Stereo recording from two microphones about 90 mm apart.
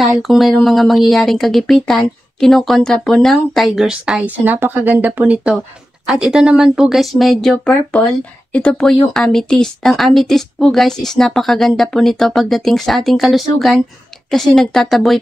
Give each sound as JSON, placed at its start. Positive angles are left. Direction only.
{"t": 0.0, "sound": "speech", "side_deg": 0}
{"t": 3.8, "sound": "speech", "side_deg": -10}
{"t": 7.5, "sound": "speech", "side_deg": 15}